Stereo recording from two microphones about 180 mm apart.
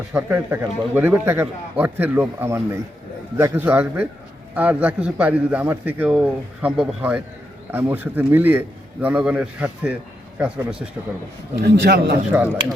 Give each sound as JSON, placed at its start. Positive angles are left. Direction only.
{"t": 0.1, "sound": "a man's voice", "side_deg": -10}
{"t": 11.6, "sound": "a man's voice", "side_deg": -65}
{"t": 12.3, "sound": "a man's voice", "side_deg": -10}